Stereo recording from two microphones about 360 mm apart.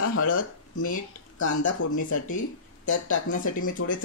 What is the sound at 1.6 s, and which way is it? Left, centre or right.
Speech, left.